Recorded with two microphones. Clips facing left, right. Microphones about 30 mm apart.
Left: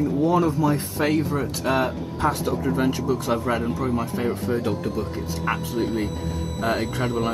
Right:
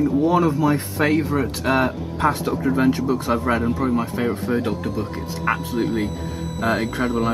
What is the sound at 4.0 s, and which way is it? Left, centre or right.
Speech, right.